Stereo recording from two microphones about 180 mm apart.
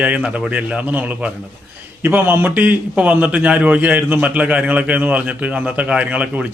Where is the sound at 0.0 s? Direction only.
5° right (ahead or behind).